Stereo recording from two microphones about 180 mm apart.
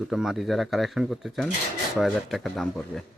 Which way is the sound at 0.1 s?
Centre (ahead or behind).